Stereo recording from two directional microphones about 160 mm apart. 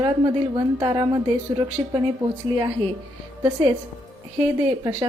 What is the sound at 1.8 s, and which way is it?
Speech, 35° right (ahead or behind).